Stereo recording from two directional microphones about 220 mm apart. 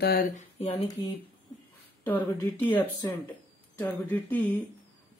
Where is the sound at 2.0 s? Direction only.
10° left (ahead or behind).